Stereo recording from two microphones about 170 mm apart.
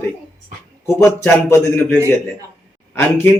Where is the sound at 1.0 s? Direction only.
15° left (ahead or behind).